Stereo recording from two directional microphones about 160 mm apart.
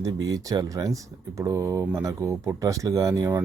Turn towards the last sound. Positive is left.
turn(degrees=-20)  # may be behind; listen again after turning